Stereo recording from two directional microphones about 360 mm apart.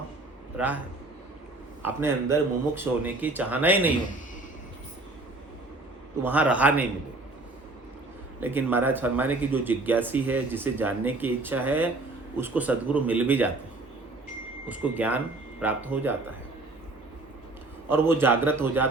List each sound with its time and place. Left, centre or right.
0.5 s a man's voice: centre
1.8 s speech: centre
6.2 s speech: centre
8.4 s speech: centre
14.7 s speech: centre
17.8 s speech: centre